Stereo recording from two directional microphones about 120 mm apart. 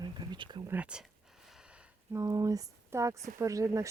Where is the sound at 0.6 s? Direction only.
15° right (ahead or behind).